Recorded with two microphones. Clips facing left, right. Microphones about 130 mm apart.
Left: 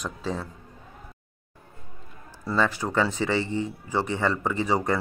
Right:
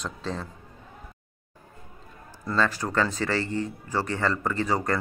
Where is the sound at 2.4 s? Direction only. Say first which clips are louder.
Left 1 dB; 15° left (ahead or behind).